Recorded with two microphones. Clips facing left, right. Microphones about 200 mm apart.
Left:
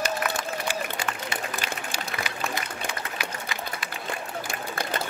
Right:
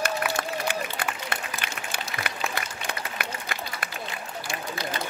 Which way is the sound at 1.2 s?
55° right (ahead or behind).